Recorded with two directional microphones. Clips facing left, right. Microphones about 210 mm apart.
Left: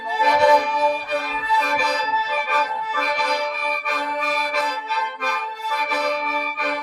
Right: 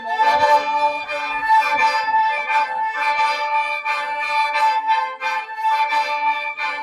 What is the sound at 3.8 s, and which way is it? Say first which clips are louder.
Accordion: left 3 dB; 50° left (ahead or behind).